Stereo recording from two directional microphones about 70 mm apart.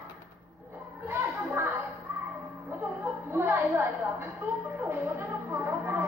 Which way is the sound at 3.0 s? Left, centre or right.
Right.